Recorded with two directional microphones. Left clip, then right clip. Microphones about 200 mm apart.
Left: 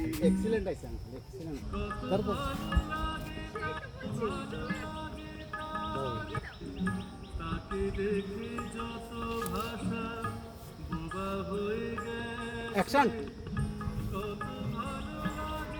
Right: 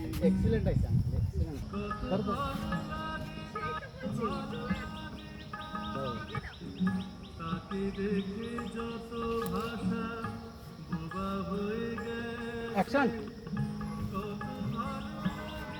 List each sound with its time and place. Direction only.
0.2 s speech: 35° left (ahead or behind)
1.7 s music: 30° left (ahead or behind)
4.2 s music: 30° left (ahead or behind)
5.7 s music: 30° left (ahead or behind)
7.4 s music: 30° left (ahead or behind)
12.7 s a man's voice: 65° left (ahead or behind)
14.1 s music: 30° left (ahead or behind)